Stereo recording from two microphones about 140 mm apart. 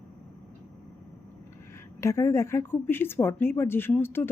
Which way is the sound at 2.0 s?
20° left (ahead or behind).